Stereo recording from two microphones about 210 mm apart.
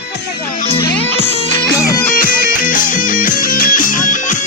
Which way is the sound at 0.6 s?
25° left (ahead or behind).